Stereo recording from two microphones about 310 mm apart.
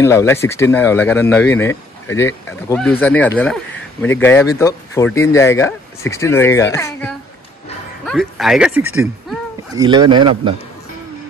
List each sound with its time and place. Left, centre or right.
0.0 s a man's voice: centre